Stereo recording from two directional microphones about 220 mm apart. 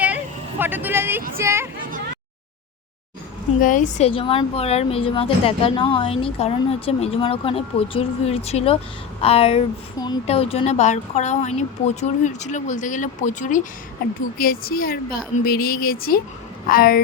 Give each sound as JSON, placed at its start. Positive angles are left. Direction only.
{"t": 0.6, "sound": "speech", "side_deg": -10}
{"t": 3.6, "sound": "a woman's voice", "side_deg": 35}